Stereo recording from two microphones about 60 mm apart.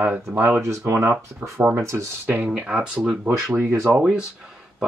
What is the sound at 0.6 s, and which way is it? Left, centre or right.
Speech, right.